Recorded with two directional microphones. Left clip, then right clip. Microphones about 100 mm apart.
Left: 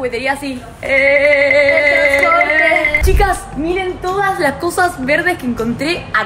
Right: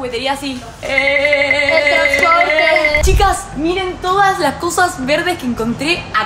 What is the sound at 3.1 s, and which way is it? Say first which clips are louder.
Speech: even; 50° left (ahead or behind).